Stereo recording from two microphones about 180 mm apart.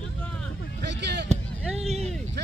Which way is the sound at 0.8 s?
70° right (ahead or behind).